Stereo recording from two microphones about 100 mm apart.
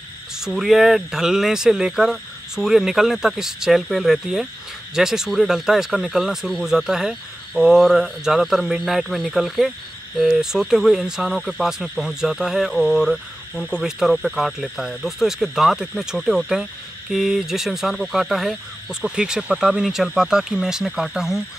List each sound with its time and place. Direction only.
0.4 s speech: centre (ahead or behind)